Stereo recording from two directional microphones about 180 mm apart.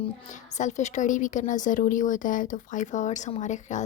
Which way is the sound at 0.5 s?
40° left (ahead or behind).